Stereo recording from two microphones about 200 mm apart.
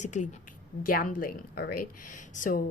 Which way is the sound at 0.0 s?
35° left (ahead or behind).